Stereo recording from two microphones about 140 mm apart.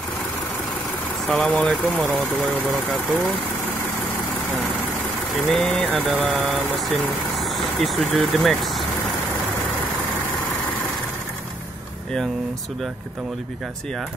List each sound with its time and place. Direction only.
1.3 s speech: 10° left (ahead or behind)
5.3 s speech: 5° left (ahead or behind)